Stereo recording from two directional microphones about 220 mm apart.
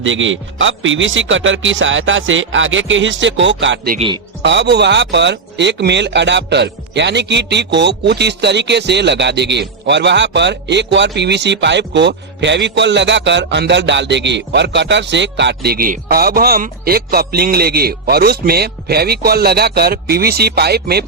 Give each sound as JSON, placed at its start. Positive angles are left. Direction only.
{"t": 0.0, "sound": "a man's voice", "side_deg": -60}